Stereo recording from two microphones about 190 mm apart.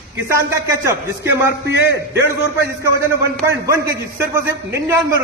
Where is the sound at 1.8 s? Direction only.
60° left (ahead or behind).